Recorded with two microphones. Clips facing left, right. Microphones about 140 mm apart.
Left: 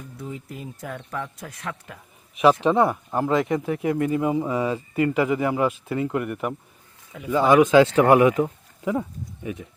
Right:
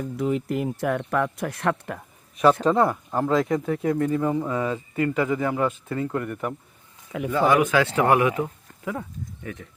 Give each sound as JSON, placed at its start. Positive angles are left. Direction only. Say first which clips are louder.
{"t": 0.0, "sound": "speech", "louder": "right 11 dB", "side_deg": -85}
{"t": 2.4, "sound": "speech", "louder": "left 1 dB", "side_deg": 10}